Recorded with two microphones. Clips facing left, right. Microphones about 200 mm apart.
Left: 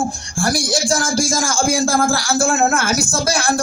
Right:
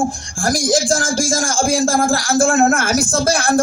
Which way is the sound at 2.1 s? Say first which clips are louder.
Right 3 dB; 50° right (ahead or behind).